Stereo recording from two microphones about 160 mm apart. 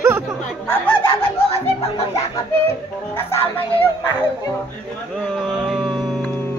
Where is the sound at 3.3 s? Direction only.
35° left (ahead or behind).